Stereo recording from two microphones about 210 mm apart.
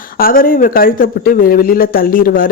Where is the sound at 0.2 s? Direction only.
45° left (ahead or behind).